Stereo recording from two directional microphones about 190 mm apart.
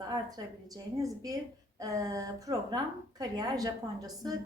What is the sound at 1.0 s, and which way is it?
A woman's voice, 20° right (ahead or behind).